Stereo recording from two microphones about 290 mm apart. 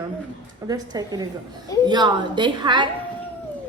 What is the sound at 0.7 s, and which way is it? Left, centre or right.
A woman's voice, centre.